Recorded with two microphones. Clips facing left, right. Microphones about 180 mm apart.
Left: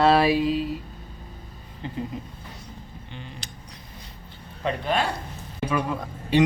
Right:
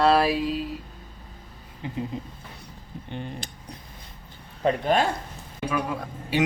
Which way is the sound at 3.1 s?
50° right (ahead or behind).